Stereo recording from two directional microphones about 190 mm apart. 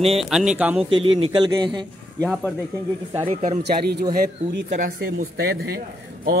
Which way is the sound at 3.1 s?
35° right (ahead or behind).